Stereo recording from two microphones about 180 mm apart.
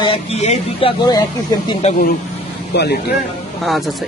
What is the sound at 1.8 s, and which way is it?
Speech, 40° left (ahead or behind).